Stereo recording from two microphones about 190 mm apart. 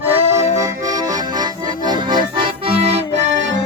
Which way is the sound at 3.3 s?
75° right (ahead or behind).